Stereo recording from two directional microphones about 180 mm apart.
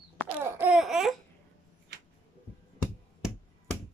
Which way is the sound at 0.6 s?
5° right (ahead or behind).